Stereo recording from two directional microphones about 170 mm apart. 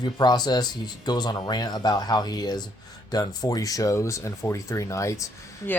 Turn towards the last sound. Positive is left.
turn(degrees=15)  # may be behind; listen again after turning